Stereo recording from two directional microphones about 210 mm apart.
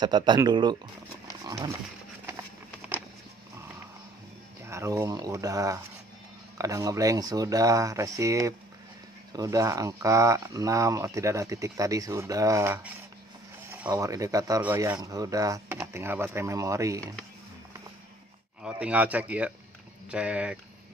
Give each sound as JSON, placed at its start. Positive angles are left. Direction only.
{"t": 0.0, "sound": "speech", "side_deg": -20}
{"t": 4.6, "sound": "speech", "side_deg": -15}
{"t": 18.6, "sound": "speech", "side_deg": -5}